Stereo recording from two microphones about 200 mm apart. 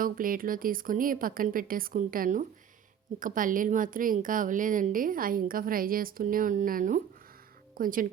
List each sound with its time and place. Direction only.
0.0 s a woman's voice: 45° right (ahead or behind)